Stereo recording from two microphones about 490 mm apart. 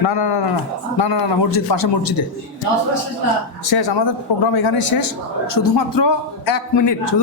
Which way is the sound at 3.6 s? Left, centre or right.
Left.